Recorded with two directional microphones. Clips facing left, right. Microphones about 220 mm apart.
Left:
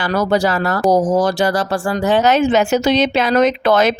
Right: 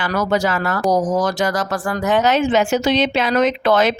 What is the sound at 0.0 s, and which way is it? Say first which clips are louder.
Speech: left 3 dB; 35° left (ahead or behind).